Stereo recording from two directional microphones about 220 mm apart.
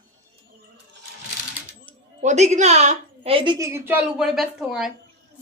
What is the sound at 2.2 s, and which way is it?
A woman's voice, 30° right (ahead or behind).